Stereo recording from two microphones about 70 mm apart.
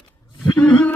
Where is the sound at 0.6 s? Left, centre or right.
Left.